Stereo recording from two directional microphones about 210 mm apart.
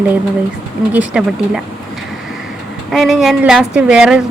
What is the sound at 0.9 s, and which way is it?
Speech, 5° right (ahead or behind).